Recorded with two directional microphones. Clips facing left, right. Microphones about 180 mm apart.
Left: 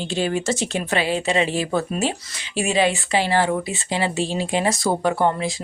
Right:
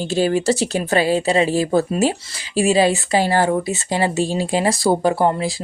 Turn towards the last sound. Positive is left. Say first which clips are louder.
# right 2 dB
turn(degrees=-35)  # may be behind; listen again after turning